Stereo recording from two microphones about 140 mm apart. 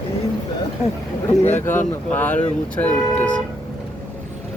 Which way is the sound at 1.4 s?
55° left (ahead or behind).